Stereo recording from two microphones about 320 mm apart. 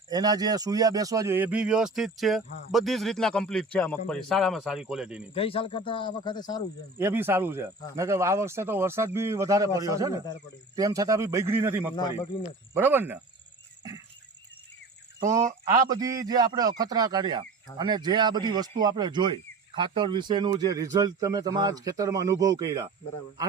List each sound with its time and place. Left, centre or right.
0.1 s speech: centre
5.3 s speech: centre
7.0 s speech: centre
11.9 s speech: centre
12.4 s speech: centre
15.2 s speech: centre